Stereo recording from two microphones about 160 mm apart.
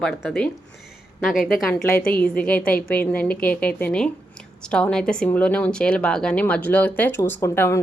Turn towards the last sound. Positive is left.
turn(degrees=15)  # may be behind; listen again after turning